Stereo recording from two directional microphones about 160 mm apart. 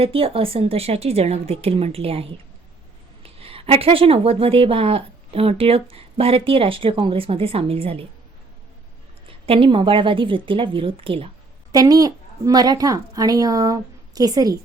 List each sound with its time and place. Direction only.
0.0 s a woman's voice: 35° right (ahead or behind)
3.2 s a woman's voice: 35° right (ahead or behind)
9.5 s a woman's voice: 35° right (ahead or behind)
11.7 s a woman's voice: 25° right (ahead or behind)